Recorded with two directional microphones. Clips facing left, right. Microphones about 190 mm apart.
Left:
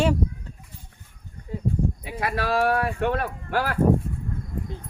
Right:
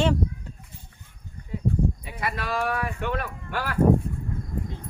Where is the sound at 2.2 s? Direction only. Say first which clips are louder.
Left 5 dB; 55° left (ahead or behind).